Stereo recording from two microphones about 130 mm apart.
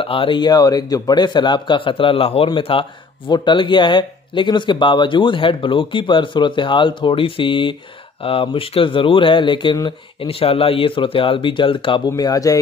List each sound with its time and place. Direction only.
0.0 s a man's voice: 45° left (ahead or behind)
12.1 s speech: 30° left (ahead or behind)